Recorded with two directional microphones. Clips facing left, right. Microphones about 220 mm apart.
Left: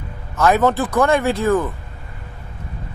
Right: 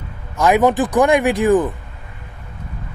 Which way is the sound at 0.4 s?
15° right (ahead or behind).